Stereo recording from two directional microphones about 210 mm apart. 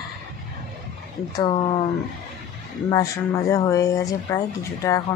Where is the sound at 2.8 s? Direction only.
15° left (ahead or behind).